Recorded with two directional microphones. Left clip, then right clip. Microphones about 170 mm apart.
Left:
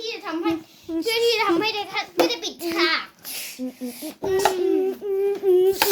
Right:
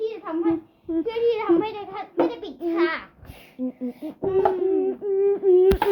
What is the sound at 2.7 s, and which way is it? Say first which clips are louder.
Babbling: left 2 dB; 20° right (ahead or behind).